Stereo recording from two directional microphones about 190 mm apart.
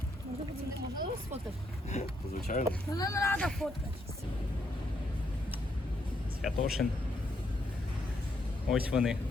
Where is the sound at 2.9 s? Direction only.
15° left (ahead or behind).